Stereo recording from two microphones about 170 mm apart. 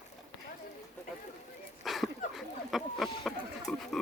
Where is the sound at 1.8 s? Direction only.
Centre (ahead or behind).